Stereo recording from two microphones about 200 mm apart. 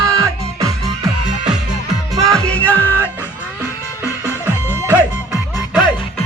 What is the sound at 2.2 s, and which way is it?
Music, 5° left (ahead or behind).